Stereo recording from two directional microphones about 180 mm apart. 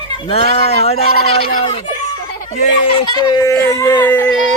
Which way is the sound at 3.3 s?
20° left (ahead or behind).